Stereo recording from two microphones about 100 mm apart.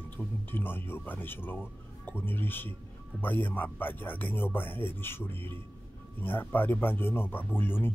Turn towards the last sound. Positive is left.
turn(degrees=20)  # may be behind; listen again after turning